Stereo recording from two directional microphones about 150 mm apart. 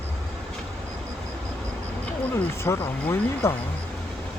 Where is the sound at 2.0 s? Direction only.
15° left (ahead or behind).